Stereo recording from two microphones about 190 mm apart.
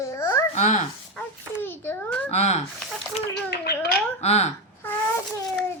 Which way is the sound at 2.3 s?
35° left (ahead or behind).